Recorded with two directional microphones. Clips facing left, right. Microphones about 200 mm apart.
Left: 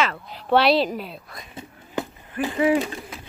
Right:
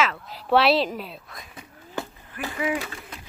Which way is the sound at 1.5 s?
20° left (ahead or behind).